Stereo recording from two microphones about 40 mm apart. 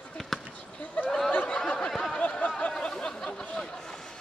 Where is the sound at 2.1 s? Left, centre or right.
Left.